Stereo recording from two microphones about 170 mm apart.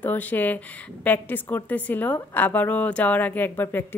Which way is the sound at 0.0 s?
10° left (ahead or behind).